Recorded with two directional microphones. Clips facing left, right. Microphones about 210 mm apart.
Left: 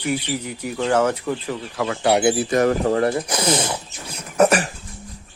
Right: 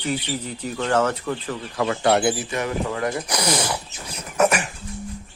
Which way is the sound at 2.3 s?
40° left (ahead or behind).